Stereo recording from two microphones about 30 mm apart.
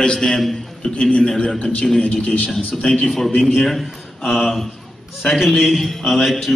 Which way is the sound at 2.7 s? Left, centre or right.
Centre.